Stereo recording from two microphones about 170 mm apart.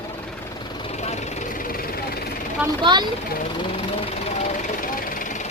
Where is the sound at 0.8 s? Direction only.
40° left (ahead or behind); by 2.3 s 65° left (ahead or behind).